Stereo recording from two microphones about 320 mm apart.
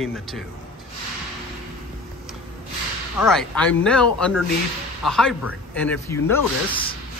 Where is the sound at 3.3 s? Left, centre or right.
Centre.